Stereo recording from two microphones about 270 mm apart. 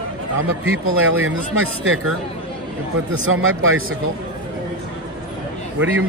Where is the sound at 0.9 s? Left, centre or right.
Right.